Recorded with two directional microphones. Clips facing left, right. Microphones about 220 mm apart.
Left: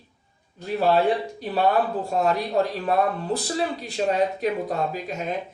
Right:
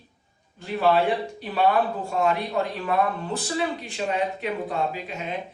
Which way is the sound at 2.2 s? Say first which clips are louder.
Left 1 dB; 35° left (ahead or behind).